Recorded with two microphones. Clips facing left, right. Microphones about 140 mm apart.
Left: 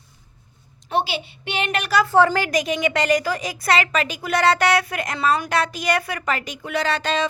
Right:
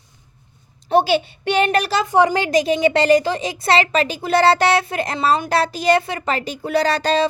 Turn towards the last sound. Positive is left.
turn(degrees=-35)  # may be behind; listen again after turning